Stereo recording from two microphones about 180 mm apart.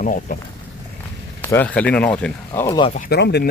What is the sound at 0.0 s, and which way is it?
Speech, 45° left (ahead or behind).